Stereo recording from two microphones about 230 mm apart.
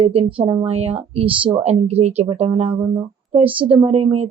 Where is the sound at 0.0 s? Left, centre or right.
Right.